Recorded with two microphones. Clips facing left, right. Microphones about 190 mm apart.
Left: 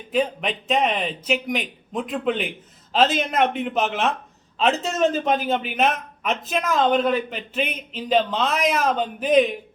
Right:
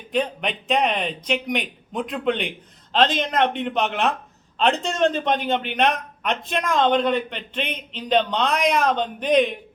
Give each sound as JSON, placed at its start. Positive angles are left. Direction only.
{"t": 0.1, "sound": "a man's voice", "side_deg": 0}